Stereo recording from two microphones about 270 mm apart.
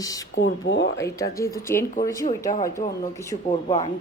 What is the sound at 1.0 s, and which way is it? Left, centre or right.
Speech, centre.